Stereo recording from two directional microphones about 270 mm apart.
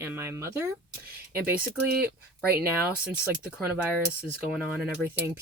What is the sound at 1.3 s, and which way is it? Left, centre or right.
Speech, right.